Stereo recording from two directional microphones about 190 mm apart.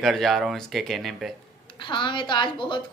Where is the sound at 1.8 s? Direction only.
25° left (ahead or behind).